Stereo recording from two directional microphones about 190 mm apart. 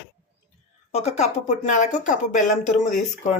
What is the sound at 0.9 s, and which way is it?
Speech, 35° left (ahead or behind).